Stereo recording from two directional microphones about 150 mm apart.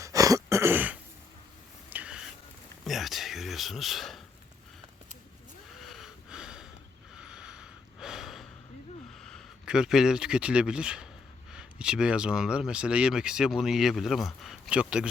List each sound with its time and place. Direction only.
0.0 s throat clearing: 20° right (ahead or behind)
1.9 s a sound: 10° right (ahead or behind)
2.8 s speech: centre (ahead or behind)
5.8 s snort: centre (ahead or behind)
9.1 s speech: 5° left (ahead or behind)